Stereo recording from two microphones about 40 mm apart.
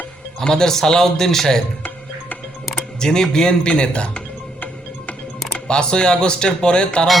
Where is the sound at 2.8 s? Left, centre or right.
Centre.